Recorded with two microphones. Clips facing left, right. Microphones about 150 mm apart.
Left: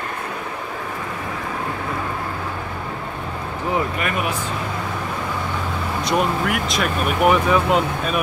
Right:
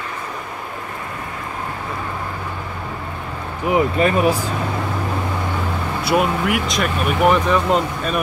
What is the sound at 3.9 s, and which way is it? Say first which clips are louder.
Speech: right 8 dB; 30° right (ahead or behind).